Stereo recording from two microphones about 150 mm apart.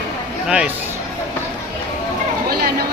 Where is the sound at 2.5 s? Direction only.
90° right.